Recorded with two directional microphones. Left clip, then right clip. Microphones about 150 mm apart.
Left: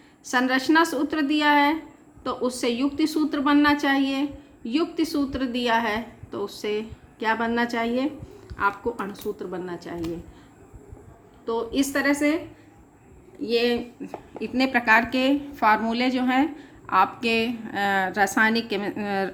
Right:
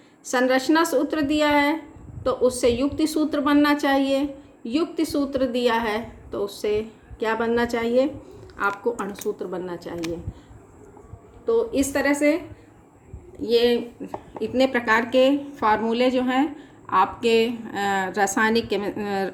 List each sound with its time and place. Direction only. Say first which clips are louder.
0.3 s a woman's voice: right 2 dB; 35° left (ahead or behind)
11.4 s a woman's voice: right 4 dB; 40° left (ahead or behind)
13.4 s a woman's voice: right 4 dB; 25° left (ahead or behind)